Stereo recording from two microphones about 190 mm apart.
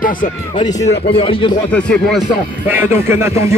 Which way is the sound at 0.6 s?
20° left (ahead or behind).